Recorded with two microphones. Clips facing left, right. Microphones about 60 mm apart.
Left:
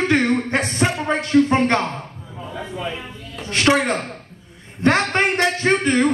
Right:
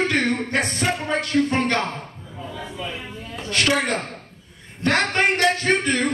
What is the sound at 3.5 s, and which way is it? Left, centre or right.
A man's voice, left.